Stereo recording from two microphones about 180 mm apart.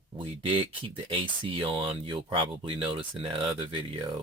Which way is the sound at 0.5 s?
30° right (ahead or behind).